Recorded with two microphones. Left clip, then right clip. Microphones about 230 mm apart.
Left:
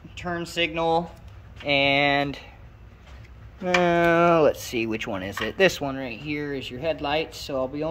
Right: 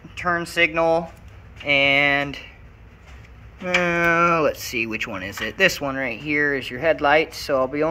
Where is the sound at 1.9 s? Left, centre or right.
Centre.